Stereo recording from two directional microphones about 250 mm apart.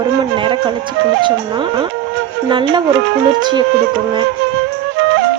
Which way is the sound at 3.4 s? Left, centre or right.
Centre.